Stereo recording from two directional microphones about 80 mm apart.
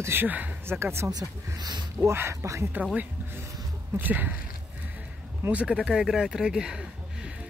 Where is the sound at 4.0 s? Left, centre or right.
Right.